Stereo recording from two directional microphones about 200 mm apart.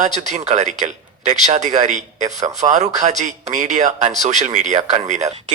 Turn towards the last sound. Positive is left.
turn(degrees=-35)  # may be behind; listen again after turning